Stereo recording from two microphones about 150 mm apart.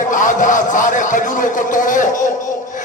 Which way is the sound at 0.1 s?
60° left (ahead or behind).